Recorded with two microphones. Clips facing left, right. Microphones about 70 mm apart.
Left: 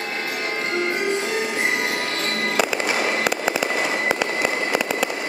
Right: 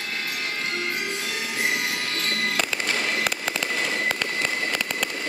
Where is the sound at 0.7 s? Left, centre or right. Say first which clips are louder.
Left 7 dB; left.